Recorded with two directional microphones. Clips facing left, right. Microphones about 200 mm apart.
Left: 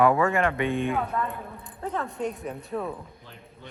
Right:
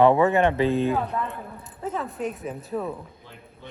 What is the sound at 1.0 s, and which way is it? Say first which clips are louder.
Speech: right 1 dB; centre (ahead or behind).